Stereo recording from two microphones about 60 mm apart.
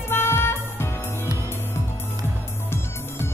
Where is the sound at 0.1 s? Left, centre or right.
Left.